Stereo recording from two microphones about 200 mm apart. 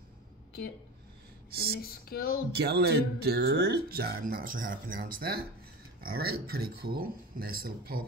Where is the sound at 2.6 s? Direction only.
50° right (ahead or behind).